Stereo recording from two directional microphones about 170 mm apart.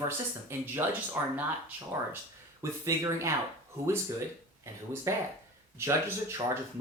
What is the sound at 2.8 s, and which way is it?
Speech, 20° right (ahead or behind).